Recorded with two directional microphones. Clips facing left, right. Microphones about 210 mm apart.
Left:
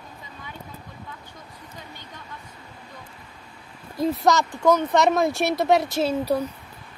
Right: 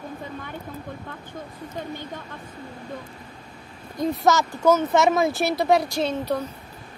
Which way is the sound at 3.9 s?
Centre (ahead or behind).